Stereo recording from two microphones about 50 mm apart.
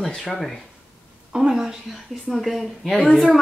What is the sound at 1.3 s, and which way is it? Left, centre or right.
A woman's voice, centre.